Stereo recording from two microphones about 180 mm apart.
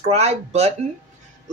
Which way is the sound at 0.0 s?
35° right (ahead or behind).